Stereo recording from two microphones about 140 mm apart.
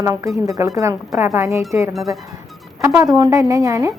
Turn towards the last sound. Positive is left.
turn(degrees=-25)  # may be behind; listen again after turning